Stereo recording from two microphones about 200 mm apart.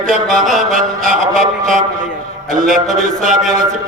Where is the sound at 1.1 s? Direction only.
40° right (ahead or behind).